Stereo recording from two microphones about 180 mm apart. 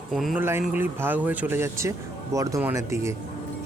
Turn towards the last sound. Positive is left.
turn(degrees=-15)  # may be behind; listen again after turning